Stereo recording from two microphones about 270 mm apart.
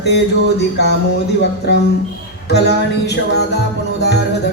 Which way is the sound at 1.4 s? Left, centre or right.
Left.